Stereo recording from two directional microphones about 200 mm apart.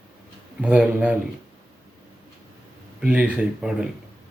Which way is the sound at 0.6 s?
5° right (ahead or behind).